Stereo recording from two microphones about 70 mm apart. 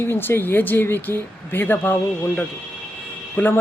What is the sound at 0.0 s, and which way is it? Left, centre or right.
Speech, left.